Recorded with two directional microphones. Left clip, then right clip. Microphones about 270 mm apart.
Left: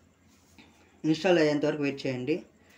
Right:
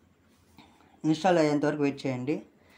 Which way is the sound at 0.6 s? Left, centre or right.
Right.